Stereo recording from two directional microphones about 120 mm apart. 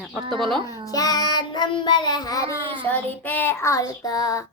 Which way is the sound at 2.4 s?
45° right (ahead or behind).